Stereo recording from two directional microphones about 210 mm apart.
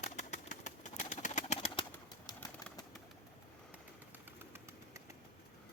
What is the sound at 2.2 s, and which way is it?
Bird, 15° left (ahead or behind).